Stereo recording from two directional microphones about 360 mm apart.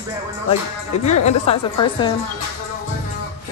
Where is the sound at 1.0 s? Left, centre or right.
Centre.